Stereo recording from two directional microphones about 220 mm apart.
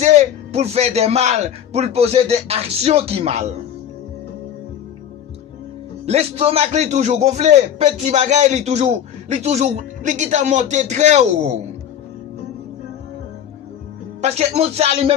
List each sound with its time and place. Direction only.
0.0 s a man's voice: 30° right (ahead or behind)
6.1 s a man's voice: 25° right (ahead or behind)
14.2 s a man's voice: 30° right (ahead or behind)